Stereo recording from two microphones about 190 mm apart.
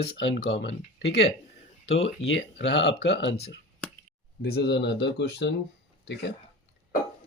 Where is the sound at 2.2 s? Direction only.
70° left (ahead or behind).